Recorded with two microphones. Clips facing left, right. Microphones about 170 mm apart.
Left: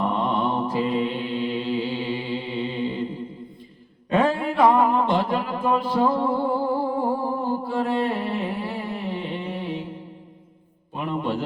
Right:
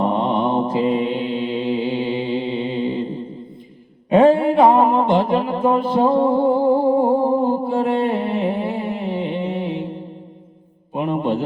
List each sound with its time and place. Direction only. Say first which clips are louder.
0.0 s mantra: right 5 dB; 25° right (ahead or behind)